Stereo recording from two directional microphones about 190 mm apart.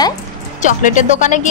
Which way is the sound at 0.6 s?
40° left (ahead or behind).